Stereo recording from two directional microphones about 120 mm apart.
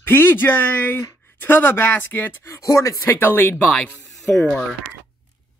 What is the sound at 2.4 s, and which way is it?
Speech, 25° left (ahead or behind).